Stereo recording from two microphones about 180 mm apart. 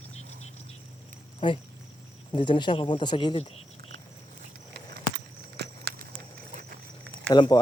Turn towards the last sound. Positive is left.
turn(degrees=25)  # may be behind; listen again after turning